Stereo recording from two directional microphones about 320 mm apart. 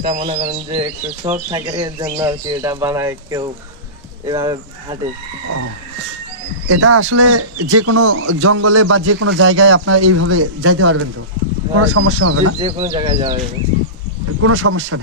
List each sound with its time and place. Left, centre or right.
0.0 s speech: right
6.7 s speech: right
12.5 s speech: centre
14.4 s speech: right